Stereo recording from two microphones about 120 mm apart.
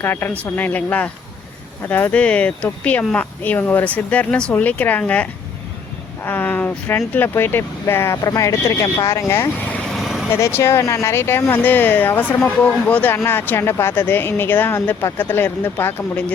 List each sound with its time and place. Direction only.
0.0 s speech: 20° left (ahead or behind)
9.9 s vehicle: centre (ahead or behind)
10.3 s speech: 20° left (ahead or behind)